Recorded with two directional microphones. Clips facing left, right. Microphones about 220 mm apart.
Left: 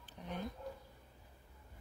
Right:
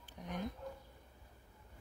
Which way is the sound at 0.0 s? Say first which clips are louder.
Right 1 dB; 10° right (ahead or behind).